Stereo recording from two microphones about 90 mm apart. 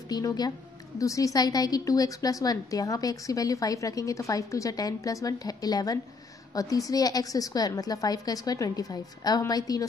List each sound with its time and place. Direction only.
0.1 s a woman's voice: 45° left (ahead or behind)